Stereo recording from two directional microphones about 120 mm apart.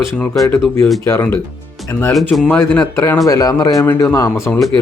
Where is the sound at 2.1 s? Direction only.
Centre (ahead or behind).